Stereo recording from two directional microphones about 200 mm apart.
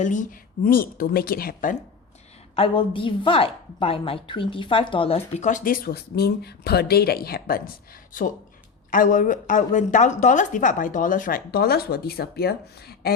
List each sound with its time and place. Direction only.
0.0 s a woman's voice: 40° left (ahead or behind)
2.6 s a woman's voice: 25° left (ahead or behind); by 7.6 s 50° left (ahead or behind)
8.9 s a woman's voice: 40° left (ahead or behind)